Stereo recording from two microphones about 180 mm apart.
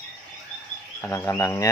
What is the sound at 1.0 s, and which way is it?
Speech, 15° left (ahead or behind).